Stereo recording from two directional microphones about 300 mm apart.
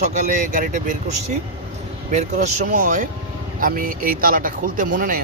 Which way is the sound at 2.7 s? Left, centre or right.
Right.